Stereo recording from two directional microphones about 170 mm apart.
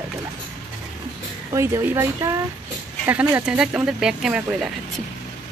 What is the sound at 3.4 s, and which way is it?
Speech, 5° right (ahead or behind).